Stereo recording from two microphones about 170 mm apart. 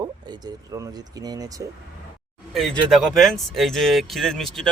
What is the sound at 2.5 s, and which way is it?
Speech, centre (ahead or behind).